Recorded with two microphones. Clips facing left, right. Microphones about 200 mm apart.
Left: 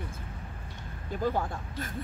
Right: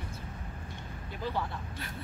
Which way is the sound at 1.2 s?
45° left (ahead or behind).